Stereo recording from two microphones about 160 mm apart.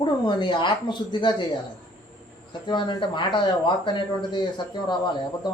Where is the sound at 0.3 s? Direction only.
30° left (ahead or behind).